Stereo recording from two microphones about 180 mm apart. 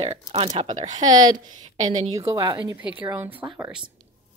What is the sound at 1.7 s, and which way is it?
Speech, 40° right (ahead or behind).